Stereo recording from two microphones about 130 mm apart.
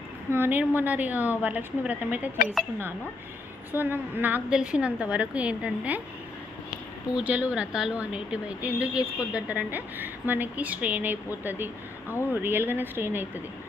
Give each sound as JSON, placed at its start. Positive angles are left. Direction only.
{"t": 0.3, "sound": "speech", "side_deg": -15}
{"t": 3.7, "sound": "speech", "side_deg": -15}
{"t": 7.2, "sound": "speech", "side_deg": -10}